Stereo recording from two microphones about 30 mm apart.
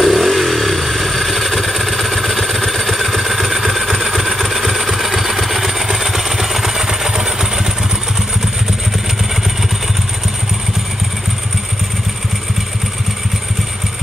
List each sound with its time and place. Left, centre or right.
0.0 s vehicle: centre